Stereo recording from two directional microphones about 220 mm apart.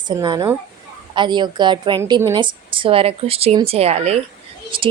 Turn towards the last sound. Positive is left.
turn(degrees=-25)  # may be behind; listen again after turning